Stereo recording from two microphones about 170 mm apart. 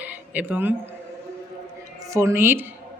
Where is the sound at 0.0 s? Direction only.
10° right (ahead or behind).